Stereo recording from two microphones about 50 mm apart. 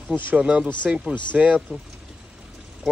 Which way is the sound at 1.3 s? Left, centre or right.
Right.